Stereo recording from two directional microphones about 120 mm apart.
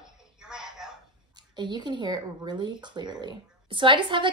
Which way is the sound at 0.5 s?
5° right (ahead or behind).